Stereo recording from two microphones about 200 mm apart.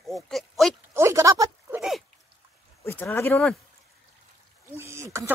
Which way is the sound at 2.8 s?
10° left (ahead or behind).